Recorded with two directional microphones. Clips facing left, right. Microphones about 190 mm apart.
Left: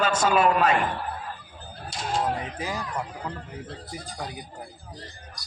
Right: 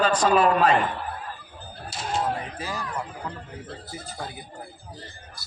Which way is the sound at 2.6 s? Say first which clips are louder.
Left 1 dB; 15° left (ahead or behind).